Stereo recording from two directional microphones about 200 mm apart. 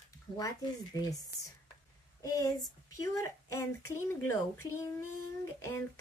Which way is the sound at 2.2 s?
15° left (ahead or behind).